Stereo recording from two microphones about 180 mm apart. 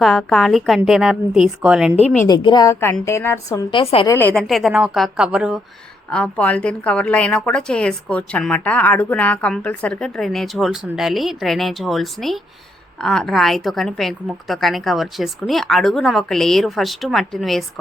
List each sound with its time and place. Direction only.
0.0 s a woman's voice: 5° left (ahead or behind)
2.2 s a woman's voice: 25° left (ahead or behind)
3.7 s a woman's voice: 30° left (ahead or behind)
4.1 s a woman's voice: 10° left (ahead or behind)
6.1 s a woman's voice: 5° left (ahead or behind)